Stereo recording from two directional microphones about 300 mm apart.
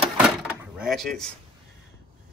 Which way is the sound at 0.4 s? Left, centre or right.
Centre.